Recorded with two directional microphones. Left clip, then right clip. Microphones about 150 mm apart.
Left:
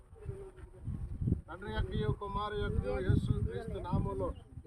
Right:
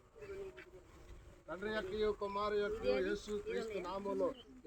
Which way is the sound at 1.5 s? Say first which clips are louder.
Right 6 dB; 15° left (ahead or behind).